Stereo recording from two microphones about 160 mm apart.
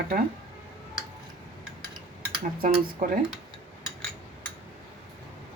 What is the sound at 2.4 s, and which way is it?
Speech, 60° right (ahead or behind).